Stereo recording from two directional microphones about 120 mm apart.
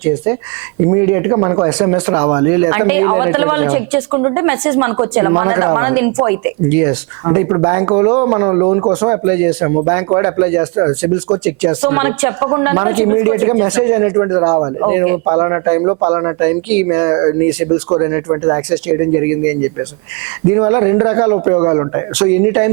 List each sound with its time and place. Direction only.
0.9 s speech: 25° right (ahead or behind)